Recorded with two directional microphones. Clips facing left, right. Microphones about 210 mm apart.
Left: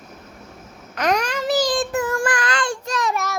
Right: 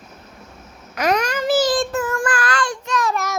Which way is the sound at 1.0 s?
5° right (ahead or behind).